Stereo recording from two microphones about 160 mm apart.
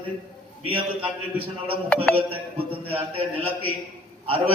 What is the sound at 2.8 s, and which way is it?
Speech, 35° right (ahead or behind).